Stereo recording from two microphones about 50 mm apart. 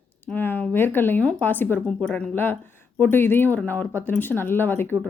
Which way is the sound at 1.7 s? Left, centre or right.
Centre.